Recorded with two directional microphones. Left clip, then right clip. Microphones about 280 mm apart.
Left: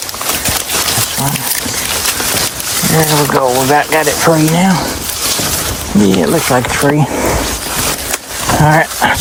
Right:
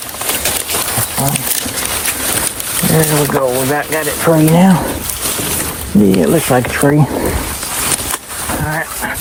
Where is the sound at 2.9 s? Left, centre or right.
Centre.